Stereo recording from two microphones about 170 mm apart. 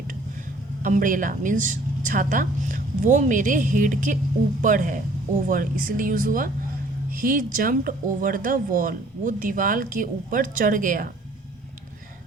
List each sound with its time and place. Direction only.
0.8 s speech: 50° right (ahead or behind)